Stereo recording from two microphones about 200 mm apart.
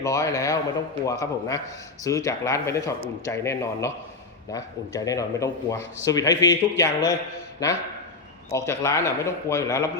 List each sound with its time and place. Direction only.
0.0 s speech: 15° left (ahead or behind)